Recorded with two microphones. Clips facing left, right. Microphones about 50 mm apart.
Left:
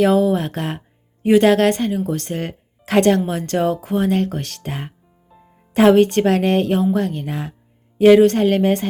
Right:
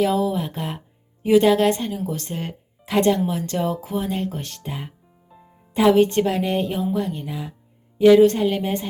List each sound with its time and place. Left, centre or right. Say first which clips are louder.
0.0 s speech: left 5 dB; left
5.7 s a woman's voice: left 4 dB; left